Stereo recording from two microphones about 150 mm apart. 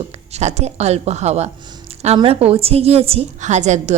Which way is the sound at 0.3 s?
45° right (ahead or behind).